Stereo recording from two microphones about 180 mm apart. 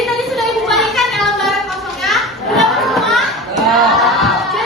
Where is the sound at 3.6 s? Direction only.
Centre (ahead or behind).